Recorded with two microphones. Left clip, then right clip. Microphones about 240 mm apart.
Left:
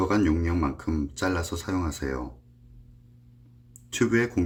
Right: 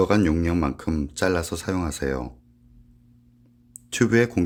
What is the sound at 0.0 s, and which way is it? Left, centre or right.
Speech, right.